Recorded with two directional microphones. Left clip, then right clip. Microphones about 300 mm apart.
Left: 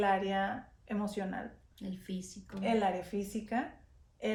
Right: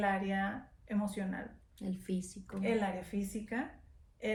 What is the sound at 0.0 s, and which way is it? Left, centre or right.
A woman's voice, centre.